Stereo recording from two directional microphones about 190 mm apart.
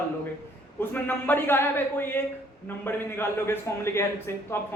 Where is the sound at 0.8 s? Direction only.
10° left (ahead or behind).